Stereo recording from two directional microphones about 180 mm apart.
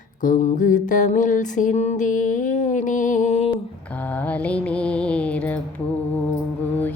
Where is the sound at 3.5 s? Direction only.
10° left (ahead or behind).